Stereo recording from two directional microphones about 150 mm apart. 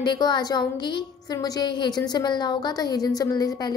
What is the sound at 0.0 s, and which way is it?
A woman's voice, 30° left (ahead or behind).